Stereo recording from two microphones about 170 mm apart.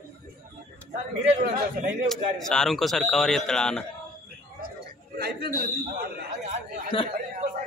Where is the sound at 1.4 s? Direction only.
65° right (ahead or behind).